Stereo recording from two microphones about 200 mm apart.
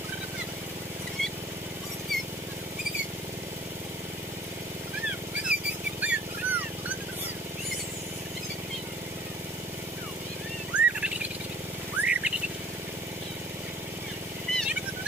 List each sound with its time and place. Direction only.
5.5 s a sound: 5° right (ahead or behind)
10.7 s bird: 5° right (ahead or behind)
12.0 s bird: 5° right (ahead or behind)
14.5 s wild animals: 5° left (ahead or behind)